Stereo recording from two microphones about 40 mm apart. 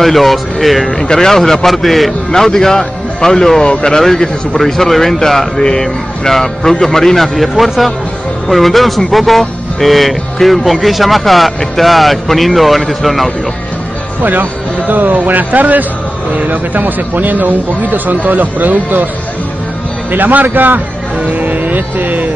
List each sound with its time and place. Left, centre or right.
0.0 s speech: centre
1.0 s a man's voice: centre
3.9 s a man's voice: centre
7.3 s speech: centre
14.2 s speech: right
20.1 s speech: right